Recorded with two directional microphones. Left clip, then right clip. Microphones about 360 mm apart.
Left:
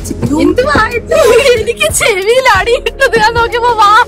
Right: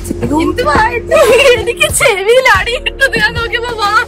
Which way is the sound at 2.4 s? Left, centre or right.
Centre.